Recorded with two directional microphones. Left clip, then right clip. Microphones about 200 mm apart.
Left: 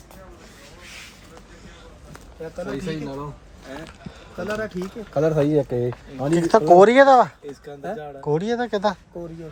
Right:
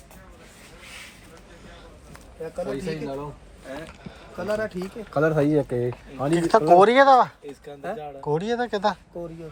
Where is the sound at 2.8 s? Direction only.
5° right (ahead or behind).